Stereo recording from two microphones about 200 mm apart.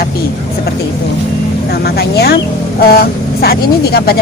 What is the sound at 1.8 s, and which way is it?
Speech, 50° left (ahead or behind).